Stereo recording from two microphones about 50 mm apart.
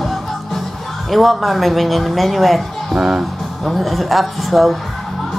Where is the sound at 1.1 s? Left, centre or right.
Centre.